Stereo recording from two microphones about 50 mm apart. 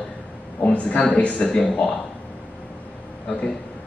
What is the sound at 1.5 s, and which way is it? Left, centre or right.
Speech, centre.